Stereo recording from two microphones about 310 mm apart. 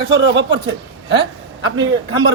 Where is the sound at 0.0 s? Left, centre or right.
Right.